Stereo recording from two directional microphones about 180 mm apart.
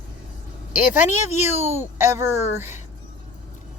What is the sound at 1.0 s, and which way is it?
Speech, 15° right (ahead or behind).